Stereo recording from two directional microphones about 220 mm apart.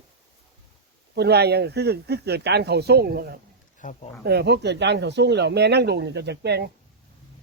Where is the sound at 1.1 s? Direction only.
50° right (ahead or behind).